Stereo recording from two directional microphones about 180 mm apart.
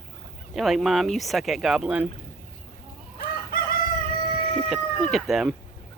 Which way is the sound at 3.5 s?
55° left (ahead or behind).